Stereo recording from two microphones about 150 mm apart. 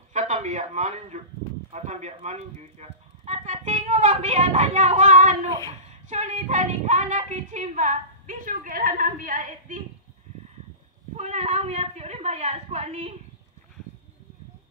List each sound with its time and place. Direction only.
0.1 s a man's voice: 50° right (ahead or behind)
11.1 s a woman's voice: 45° right (ahead or behind)